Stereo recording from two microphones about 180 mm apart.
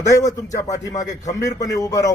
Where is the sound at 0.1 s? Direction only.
20° left (ahead or behind).